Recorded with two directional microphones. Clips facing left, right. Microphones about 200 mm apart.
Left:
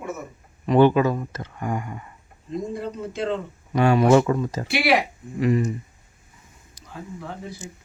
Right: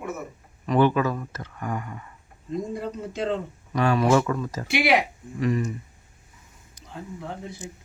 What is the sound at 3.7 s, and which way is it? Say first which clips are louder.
Speech: left 4 dB; 25° left (ahead or behind).